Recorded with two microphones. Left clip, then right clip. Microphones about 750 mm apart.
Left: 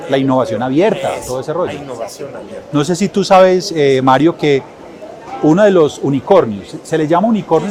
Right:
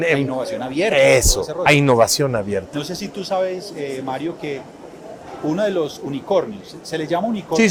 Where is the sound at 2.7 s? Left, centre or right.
Left.